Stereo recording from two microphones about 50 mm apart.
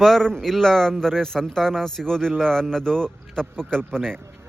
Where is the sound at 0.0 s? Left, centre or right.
Centre.